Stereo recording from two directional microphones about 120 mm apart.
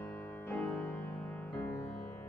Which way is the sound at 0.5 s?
15° left (ahead or behind).